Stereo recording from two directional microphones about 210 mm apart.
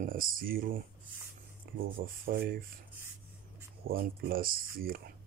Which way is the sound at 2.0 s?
45° right (ahead or behind).